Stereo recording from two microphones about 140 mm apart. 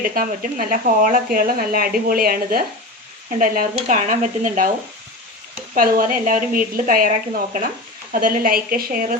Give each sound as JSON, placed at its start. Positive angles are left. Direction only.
{"t": 0.1, "sound": "speech", "side_deg": -80}
{"t": 3.3, "sound": "speech", "side_deg": -80}
{"t": 5.7, "sound": "a woman's voice", "side_deg": -90}